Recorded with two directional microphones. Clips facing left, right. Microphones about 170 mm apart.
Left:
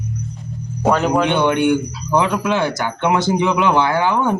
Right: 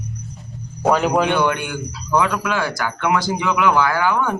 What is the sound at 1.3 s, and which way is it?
Speech, 25° left (ahead or behind).